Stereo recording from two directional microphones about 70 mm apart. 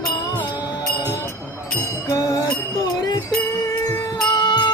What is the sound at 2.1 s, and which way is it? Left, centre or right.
Music, left.